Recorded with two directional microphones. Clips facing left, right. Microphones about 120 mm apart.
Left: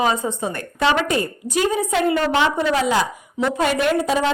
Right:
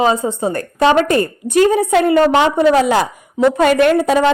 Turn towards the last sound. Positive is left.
turn(degrees=-60)  # may be behind; listen again after turning